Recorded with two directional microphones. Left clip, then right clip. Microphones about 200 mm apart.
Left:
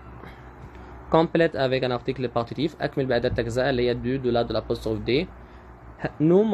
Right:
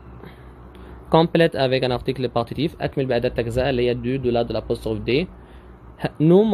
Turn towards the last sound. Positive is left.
turn(degrees=-20)  # may be behind; listen again after turning